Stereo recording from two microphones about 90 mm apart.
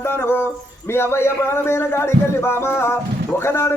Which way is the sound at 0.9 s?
30° left (ahead or behind).